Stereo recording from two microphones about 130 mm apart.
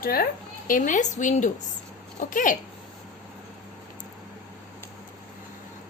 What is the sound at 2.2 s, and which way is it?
Speech, 90° left.